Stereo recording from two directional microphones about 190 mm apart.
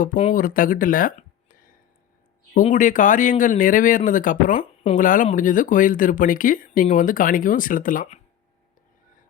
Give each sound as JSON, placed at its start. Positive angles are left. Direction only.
{"t": 0.2, "sound": "speech", "side_deg": 45}
{"t": 2.6, "sound": "speech", "side_deg": 40}